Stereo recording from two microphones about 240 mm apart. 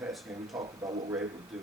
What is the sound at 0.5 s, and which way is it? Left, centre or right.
Speech, centre.